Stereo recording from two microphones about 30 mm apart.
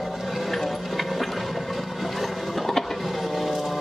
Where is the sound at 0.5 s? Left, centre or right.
Centre.